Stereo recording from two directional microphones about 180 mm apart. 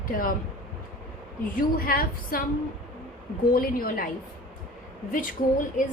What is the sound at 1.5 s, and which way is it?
Speech, 50° left (ahead or behind).